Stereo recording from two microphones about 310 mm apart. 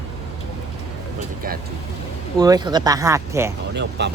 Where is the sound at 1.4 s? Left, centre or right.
Right.